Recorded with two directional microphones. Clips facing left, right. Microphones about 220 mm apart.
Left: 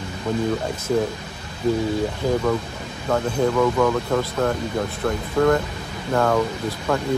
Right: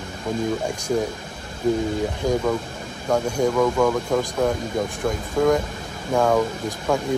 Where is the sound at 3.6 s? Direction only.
10° right (ahead or behind).